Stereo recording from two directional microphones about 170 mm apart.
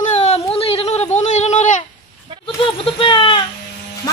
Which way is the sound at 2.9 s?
30° left (ahead or behind).